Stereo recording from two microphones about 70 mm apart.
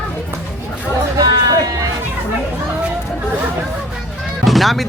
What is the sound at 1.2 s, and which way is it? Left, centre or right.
Music, right.